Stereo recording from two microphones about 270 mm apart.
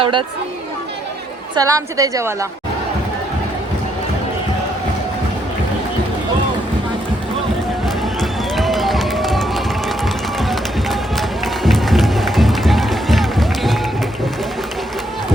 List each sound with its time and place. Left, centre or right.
0.0 s a woman's voice: centre
1.5 s a woman's voice: centre
8.2 s music: centre